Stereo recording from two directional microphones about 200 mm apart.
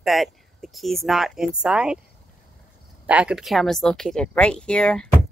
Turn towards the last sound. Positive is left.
turn(degrees=5)  # may be behind; listen again after turning